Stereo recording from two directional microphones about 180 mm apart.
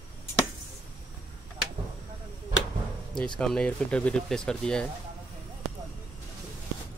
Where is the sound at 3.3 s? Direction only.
5° left (ahead or behind).